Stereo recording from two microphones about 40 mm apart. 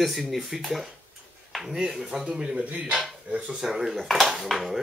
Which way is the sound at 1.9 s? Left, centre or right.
Centre.